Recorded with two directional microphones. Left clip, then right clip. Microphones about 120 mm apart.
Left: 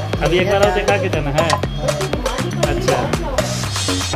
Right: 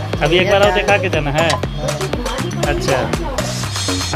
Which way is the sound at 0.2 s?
5° right (ahead or behind).